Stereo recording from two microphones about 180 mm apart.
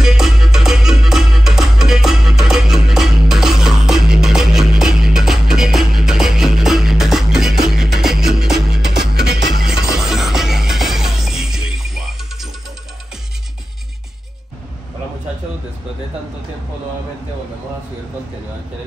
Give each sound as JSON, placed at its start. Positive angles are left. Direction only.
{"t": 0.0, "sound": "music", "side_deg": -5}
{"t": 9.1, "sound": "music", "side_deg": -70}
{"t": 9.6, "sound": "music", "side_deg": -5}